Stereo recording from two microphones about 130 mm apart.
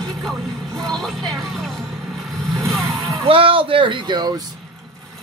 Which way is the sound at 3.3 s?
45° right (ahead or behind).